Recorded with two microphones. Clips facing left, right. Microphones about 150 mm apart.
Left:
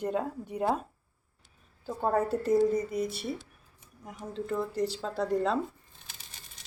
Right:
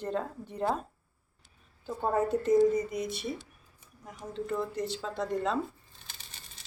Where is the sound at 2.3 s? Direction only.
5° left (ahead or behind).